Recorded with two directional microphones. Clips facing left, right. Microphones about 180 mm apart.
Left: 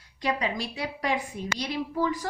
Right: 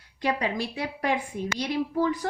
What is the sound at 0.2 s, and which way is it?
A woman's voice, 55° right (ahead or behind).